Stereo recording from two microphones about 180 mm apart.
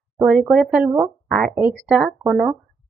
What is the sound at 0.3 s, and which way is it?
Speech, centre (ahead or behind).